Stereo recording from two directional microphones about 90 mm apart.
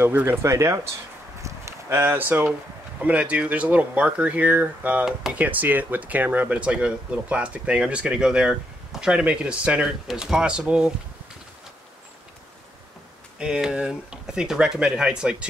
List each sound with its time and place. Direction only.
0.0 s speech: 25° right (ahead or behind)
1.4 s a sound: 25° right (ahead or behind)
3.0 s speech: 15° right (ahead or behind)
13.4 s speech: 10° right (ahead or behind)